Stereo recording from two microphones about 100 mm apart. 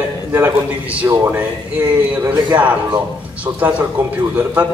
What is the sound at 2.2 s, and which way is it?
A man's voice, 40° right (ahead or behind).